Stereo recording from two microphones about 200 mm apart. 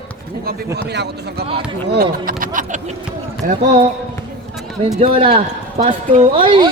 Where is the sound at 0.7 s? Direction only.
55° right (ahead or behind).